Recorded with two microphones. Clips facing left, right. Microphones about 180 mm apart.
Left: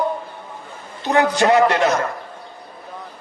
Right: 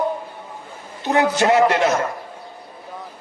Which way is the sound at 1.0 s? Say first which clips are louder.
Left 1 dB; 20° right (ahead or behind).